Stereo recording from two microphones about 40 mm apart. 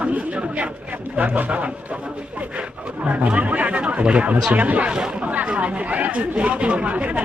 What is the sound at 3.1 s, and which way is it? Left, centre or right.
Speech, right.